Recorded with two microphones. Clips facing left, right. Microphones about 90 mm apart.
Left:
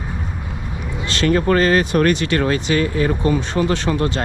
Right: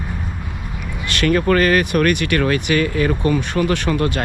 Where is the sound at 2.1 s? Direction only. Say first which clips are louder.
Even; 60° right (ahead or behind).